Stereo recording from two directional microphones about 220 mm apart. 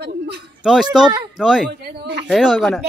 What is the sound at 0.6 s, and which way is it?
Speech, centre (ahead or behind).